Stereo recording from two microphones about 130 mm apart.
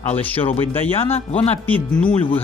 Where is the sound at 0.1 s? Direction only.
15° left (ahead or behind).